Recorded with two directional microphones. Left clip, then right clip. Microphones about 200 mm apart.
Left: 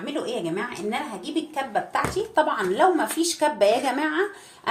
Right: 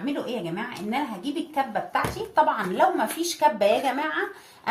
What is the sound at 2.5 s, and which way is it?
A woman's voice, 30° left (ahead or behind).